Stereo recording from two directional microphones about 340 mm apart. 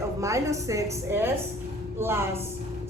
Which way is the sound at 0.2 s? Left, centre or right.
Centre.